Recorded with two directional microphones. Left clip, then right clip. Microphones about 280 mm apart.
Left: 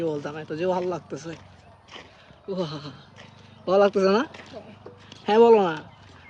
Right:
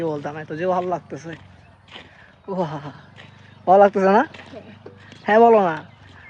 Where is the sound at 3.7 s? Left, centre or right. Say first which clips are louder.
Right 6 dB; centre.